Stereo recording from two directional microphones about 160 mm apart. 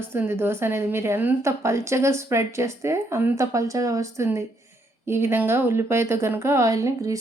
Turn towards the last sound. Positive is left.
turn(degrees=-20)  # may be behind; listen again after turning